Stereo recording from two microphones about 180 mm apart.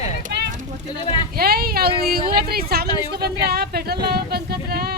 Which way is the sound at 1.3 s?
60° right (ahead or behind).